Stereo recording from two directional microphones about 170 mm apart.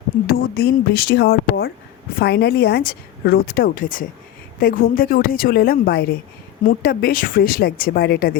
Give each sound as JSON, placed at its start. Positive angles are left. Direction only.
{"t": 0.3, "sound": "speech", "side_deg": 65}